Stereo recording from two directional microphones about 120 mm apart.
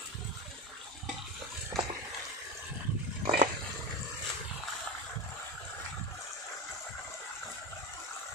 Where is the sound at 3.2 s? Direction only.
55° right (ahead or behind).